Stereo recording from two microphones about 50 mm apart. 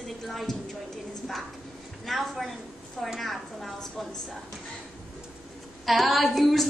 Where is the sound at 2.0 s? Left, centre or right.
Centre.